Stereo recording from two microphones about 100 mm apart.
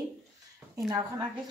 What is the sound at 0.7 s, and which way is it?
Speech, 35° right (ahead or behind).